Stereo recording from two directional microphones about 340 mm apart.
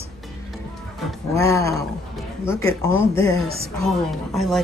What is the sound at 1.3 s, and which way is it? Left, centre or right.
A woman's voice, centre.